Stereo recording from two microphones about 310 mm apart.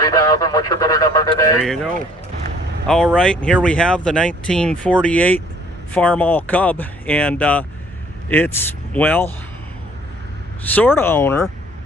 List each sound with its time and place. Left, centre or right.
0.0 s speech: centre
1.6 s speech: centre
10.8 s speech: centre